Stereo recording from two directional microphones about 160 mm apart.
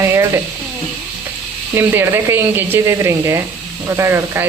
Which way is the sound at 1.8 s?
15° right (ahead or behind).